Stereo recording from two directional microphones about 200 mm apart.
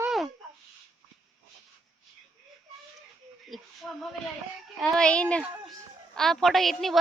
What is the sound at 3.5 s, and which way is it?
Speech, centre (ahead or behind).